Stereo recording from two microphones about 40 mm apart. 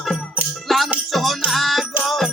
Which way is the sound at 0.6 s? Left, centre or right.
Centre.